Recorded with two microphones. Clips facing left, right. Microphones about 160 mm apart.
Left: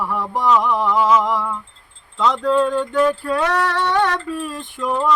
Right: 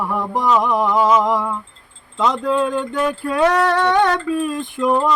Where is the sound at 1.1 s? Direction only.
15° right (ahead or behind).